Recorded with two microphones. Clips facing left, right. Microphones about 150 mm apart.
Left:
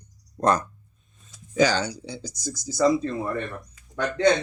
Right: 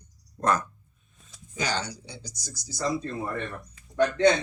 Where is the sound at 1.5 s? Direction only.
90° left.